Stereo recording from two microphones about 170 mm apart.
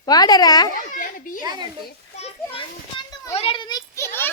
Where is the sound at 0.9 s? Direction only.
50° left (ahead or behind).